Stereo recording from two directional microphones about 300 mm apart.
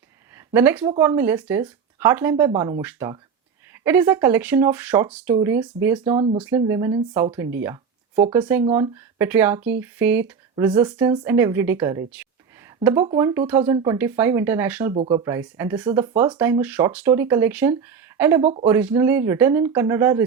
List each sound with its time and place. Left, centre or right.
0.3 s speech: centre
14.9 s speech: centre
18.4 s speech: centre
18.7 s speech: centre